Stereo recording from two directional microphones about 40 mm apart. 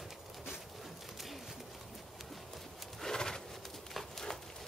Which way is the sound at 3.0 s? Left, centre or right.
Centre.